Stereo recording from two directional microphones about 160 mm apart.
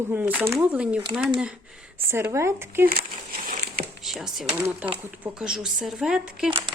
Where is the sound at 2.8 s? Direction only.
70° right (ahead or behind).